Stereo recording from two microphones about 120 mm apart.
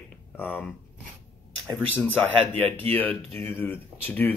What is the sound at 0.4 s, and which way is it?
Speech, 15° left (ahead or behind).